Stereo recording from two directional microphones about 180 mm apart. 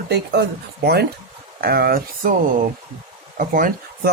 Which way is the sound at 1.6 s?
60° right (ahead or behind).